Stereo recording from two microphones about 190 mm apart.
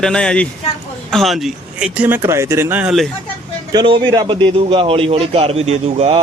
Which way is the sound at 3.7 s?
25° right (ahead or behind).